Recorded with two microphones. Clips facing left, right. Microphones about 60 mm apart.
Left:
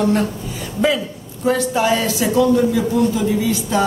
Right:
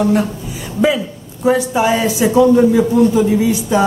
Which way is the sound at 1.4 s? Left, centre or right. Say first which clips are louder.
Right 3 dB; centre.